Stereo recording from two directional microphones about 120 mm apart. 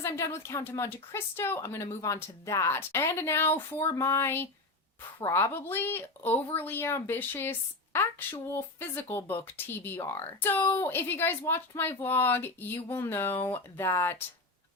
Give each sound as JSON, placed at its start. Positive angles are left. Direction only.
{"t": 0.0, "sound": "a woman's voice", "side_deg": 25}